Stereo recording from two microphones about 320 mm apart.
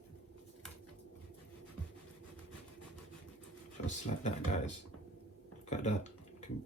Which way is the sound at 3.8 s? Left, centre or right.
Left.